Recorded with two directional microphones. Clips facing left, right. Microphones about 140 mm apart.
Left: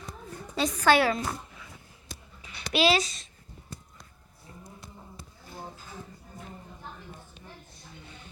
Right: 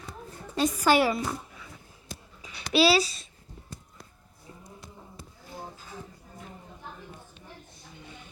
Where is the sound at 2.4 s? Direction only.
35° right (ahead or behind).